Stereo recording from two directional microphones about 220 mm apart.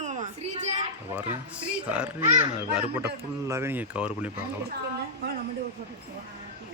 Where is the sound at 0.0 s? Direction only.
30° right (ahead or behind).